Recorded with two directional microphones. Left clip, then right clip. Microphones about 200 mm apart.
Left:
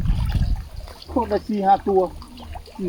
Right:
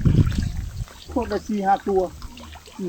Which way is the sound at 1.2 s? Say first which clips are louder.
Left 3 dB; 5° left (ahead or behind).